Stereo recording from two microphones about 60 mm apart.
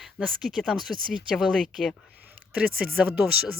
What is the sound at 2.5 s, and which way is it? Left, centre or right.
Speech, right.